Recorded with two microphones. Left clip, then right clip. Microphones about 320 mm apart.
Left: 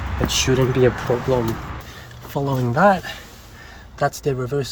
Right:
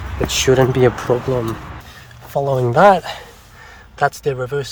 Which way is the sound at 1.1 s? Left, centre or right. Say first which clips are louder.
Right 4 dB; right.